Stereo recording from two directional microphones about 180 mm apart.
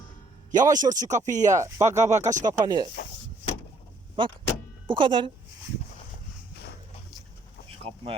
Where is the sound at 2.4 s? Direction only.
20° right (ahead or behind).